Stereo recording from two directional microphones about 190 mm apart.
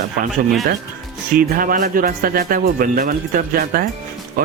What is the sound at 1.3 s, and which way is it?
Speech, 50° right (ahead or behind).